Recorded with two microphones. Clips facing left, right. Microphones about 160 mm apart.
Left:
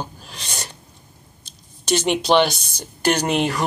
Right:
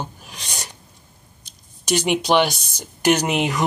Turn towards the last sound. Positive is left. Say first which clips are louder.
# right 1 dB
turn(degrees=-10)  # may be behind; listen again after turning